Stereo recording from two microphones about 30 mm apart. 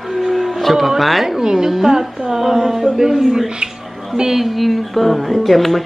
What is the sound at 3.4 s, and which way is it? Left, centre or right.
Speech, right.